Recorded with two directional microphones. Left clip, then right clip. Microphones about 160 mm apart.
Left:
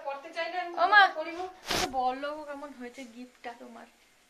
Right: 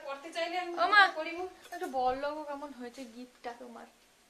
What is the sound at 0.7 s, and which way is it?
Speech, 15° right (ahead or behind).